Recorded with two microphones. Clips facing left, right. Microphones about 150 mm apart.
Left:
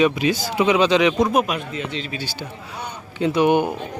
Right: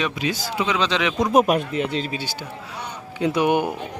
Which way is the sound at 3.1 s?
10° right (ahead or behind).